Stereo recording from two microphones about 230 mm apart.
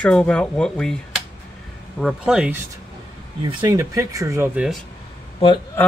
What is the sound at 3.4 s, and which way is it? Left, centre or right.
Speech, centre.